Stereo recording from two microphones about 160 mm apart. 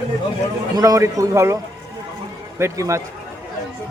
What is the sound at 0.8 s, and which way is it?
A man's voice, 20° right (ahead or behind).